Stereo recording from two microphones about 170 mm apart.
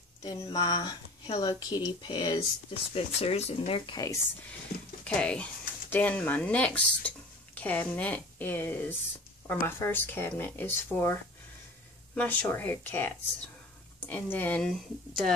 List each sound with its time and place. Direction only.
0.2 s speech: 25° left (ahead or behind)
5.0 s speech: 5° left (ahead or behind)
12.2 s speech: 10° left (ahead or behind)